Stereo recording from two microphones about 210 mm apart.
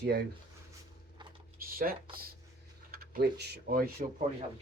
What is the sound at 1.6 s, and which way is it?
Speech, 45° right (ahead or behind).